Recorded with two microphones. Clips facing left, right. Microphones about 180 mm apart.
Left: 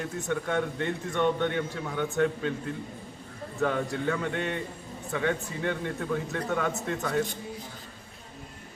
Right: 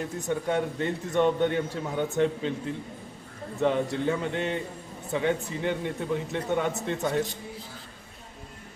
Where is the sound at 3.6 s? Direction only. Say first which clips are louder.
Right 3 dB; 25° right (ahead or behind).